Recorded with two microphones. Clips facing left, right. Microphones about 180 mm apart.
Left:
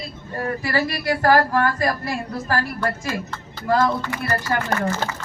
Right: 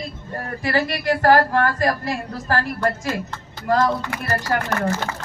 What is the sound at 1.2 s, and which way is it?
A woman's voice, 30° right (ahead or behind).